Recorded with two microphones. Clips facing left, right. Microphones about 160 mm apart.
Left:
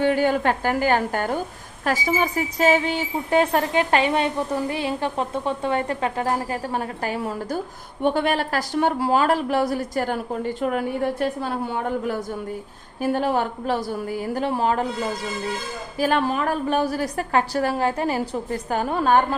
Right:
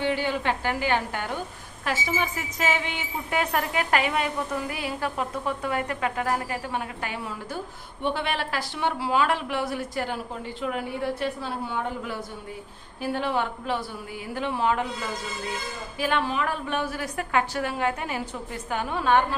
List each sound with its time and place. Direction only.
0.0 s a woman's voice: 45° left (ahead or behind)
16.0 s a woman's voice: 40° left (ahead or behind)